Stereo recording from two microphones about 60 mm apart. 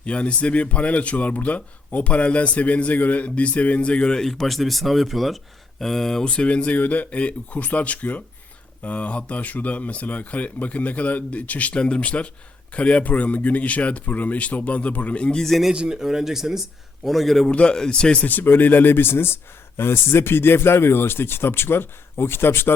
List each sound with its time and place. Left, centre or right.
0.0 s speech: centre
6.3 s speech: centre
15.4 s speech: centre
15.7 s speech: centre
17.5 s speech: centre
18.3 s speech: left